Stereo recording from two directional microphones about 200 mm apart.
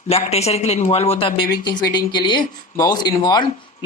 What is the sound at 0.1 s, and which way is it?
Speech, 30° left (ahead or behind).